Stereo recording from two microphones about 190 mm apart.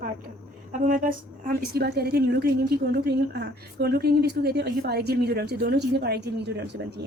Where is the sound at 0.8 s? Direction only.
45° right (ahead or behind).